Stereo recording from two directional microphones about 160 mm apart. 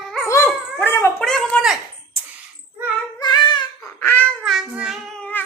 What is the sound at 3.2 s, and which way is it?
Child singing, 30° left (ahead or behind).